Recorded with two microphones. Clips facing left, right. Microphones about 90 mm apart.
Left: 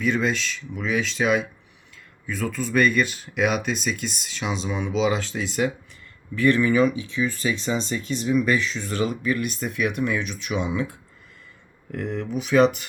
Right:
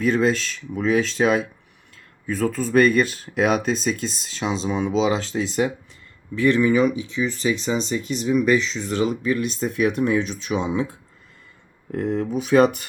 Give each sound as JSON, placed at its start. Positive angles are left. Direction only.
{"t": 0.0, "sound": "speech", "side_deg": -40}